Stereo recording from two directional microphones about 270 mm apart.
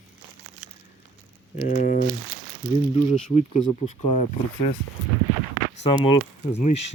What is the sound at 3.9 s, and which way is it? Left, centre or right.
Speech, left.